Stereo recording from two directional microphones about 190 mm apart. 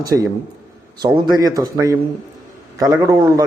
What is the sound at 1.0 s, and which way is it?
A man's voice, 20° right (ahead or behind).